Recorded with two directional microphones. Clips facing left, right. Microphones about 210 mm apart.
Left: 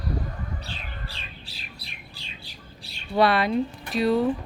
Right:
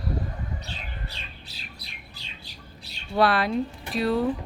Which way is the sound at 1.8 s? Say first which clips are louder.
Left 1 dB; 30° left (ahead or behind).